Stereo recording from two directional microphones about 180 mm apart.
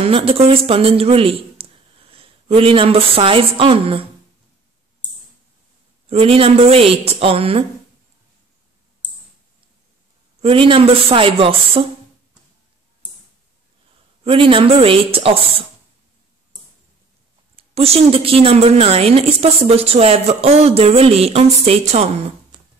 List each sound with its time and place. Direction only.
0.0 s speech: 30° right (ahead or behind)
6.0 s a woman's voice: 30° right (ahead or behind)
10.4 s a woman's voice: 30° right (ahead or behind)
14.2 s a woman's voice: 30° right (ahead or behind)
17.6 s a woman's voice: 35° right (ahead or behind)